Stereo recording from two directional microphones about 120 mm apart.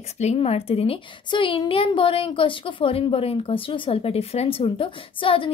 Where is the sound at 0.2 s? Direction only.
60° left (ahead or behind).